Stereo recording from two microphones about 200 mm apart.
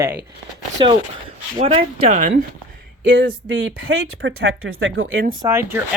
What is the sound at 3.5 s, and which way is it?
Speech, 85° right.